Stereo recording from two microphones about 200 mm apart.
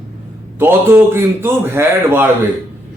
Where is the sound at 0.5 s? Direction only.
10° right (ahead or behind).